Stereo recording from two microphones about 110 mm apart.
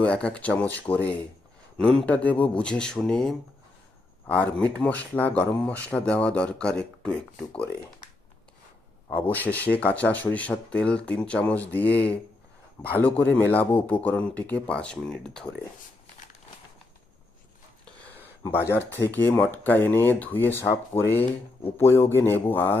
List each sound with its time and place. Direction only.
0.0 s speech: 10° left (ahead or behind)
4.6 s speech: 10° left (ahead or behind)
9.2 s speech: 15° left (ahead or behind)
18.2 s speech: 20° left (ahead or behind)